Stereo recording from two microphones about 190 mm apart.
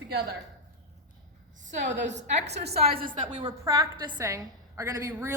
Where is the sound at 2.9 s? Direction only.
50° right (ahead or behind).